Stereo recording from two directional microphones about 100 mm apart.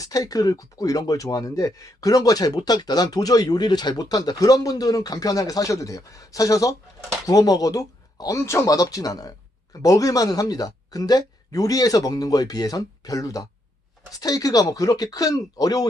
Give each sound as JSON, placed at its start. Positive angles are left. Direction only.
{"t": 0.0, "sound": "speech", "side_deg": 35}